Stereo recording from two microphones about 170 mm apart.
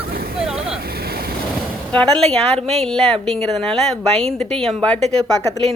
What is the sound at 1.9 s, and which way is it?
A woman's voice, 5° left (ahead or behind).